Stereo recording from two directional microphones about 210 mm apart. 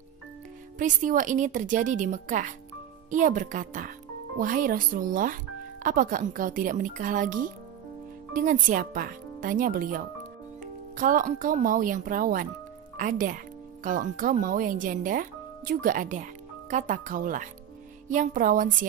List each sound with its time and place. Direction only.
0.7 s speech: 40° right (ahead or behind)